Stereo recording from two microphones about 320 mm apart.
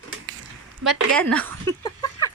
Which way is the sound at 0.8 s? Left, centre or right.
Centre.